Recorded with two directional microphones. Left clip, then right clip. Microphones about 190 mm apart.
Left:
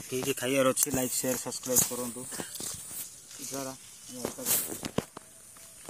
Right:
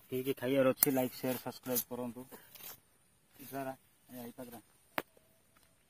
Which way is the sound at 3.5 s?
30° right (ahead or behind).